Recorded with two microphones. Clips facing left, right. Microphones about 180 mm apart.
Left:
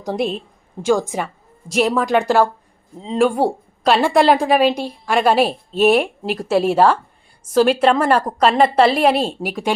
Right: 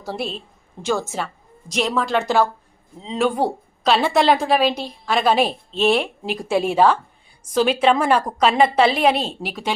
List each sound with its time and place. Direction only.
0.0 s a woman's voice: 15° left (ahead or behind)